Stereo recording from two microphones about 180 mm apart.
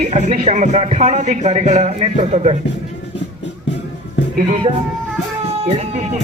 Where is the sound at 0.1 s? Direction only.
40° right (ahead or behind).